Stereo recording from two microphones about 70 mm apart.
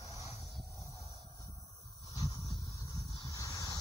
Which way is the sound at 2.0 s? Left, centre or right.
Left.